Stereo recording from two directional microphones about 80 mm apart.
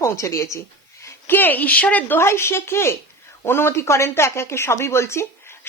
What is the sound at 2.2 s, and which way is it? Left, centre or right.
A woman's voice, left.